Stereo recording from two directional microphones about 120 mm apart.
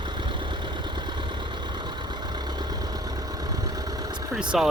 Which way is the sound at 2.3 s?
35° right (ahead or behind).